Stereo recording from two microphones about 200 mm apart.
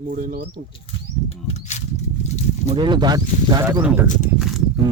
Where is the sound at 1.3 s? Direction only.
35° left (ahead or behind).